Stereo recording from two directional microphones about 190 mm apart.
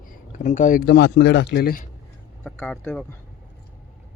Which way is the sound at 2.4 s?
10° left (ahead or behind).